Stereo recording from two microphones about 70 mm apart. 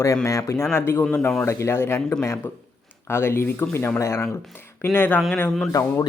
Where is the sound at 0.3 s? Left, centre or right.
Left.